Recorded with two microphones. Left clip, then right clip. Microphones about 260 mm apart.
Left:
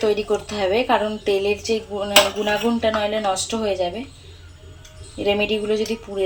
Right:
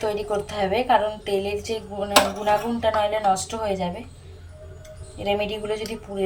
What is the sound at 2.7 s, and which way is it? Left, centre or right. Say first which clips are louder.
Speech: left 1 dB; centre.